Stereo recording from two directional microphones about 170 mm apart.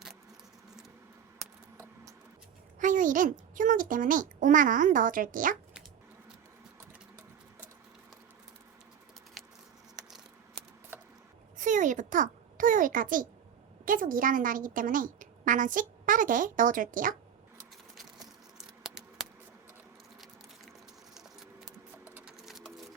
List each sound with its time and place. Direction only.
2.8 s a woman's voice: 50° right (ahead or behind)
9.9 s a sound: centre (ahead or behind)
11.5 s a child's voice: 50° right (ahead or behind)
18.8 s a sound: 5° right (ahead or behind)
22.0 s sewing machine: 10° right (ahead or behind)
22.4 s sewing machine: centre (ahead or behind)